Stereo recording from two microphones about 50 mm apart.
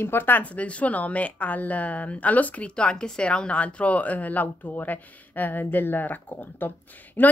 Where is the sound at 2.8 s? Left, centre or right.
Centre; by 7.3 s left.